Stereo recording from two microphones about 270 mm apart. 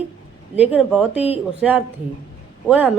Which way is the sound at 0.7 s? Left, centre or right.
Centre.